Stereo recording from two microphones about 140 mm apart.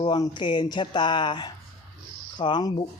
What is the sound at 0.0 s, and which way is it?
Speech, 35° left (ahead or behind).